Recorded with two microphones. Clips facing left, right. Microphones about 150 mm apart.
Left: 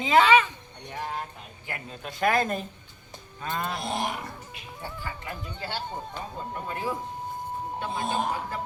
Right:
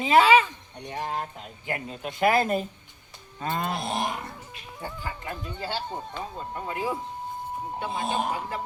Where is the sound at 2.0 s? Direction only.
15° right (ahead or behind).